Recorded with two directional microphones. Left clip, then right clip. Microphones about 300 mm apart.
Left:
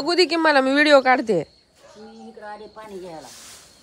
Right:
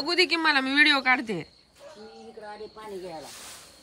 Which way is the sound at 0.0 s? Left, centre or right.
Left.